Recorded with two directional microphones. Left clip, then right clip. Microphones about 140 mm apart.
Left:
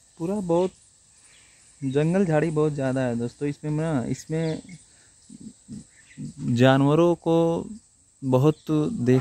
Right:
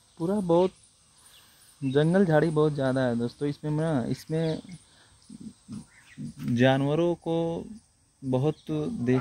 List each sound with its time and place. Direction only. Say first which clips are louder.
0.4 s speech: even; centre (ahead or behind)
1.8 s speech: even; 10° left (ahead or behind)
6.5 s speech: left 4 dB; 65° left (ahead or behind); by 9.2 s 85° left